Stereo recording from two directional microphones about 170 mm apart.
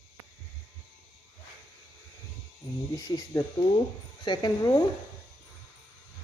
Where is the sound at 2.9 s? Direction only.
25° left (ahead or behind).